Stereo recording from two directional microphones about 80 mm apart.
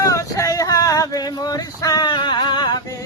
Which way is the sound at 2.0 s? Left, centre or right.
Left.